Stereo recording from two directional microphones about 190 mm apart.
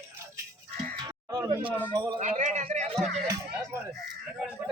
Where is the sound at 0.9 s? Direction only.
20° right (ahead or behind).